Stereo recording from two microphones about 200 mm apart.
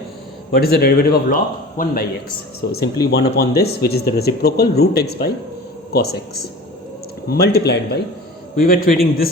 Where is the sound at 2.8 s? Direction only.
20° left (ahead or behind).